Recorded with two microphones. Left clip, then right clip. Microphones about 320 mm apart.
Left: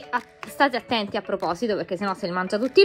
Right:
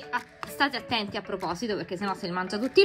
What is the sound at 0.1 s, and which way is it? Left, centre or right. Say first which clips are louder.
Music: left 4 dB; centre.